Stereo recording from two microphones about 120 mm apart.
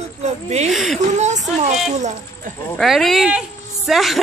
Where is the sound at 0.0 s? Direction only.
65° right (ahead or behind).